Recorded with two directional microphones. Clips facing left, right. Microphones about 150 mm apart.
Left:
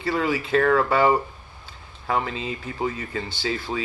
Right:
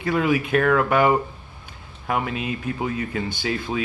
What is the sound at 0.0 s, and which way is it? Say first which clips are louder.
Speech: right 3 dB; 20° right (ahead or behind).